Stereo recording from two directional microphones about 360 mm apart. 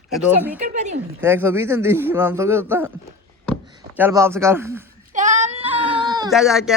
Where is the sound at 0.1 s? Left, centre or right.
Centre.